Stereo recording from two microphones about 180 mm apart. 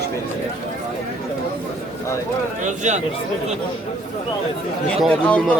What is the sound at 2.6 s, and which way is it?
Speech, 40° right (ahead or behind).